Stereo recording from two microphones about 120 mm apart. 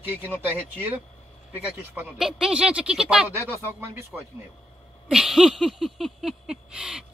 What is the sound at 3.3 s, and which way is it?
Speech, 20° right (ahead or behind).